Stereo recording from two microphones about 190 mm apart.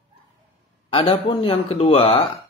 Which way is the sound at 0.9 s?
30° left (ahead or behind).